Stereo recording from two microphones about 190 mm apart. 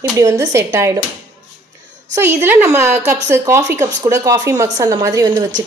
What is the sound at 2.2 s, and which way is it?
A woman's voice, 10° right (ahead or behind).